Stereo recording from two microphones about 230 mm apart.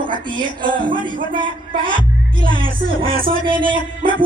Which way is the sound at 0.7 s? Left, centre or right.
Right.